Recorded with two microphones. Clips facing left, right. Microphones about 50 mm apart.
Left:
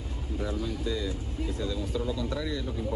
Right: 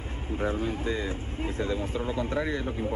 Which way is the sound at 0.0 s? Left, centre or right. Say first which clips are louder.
Right 4 dB; right.